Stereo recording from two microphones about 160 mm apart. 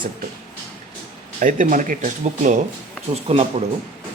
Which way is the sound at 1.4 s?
55° right (ahead or behind).